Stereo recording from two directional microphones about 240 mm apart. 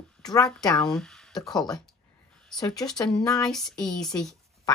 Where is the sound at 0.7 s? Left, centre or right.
Centre.